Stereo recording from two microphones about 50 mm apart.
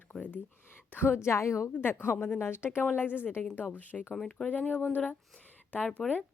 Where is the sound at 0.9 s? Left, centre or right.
Left.